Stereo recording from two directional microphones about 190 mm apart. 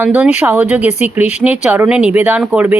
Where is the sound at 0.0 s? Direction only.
10° right (ahead or behind).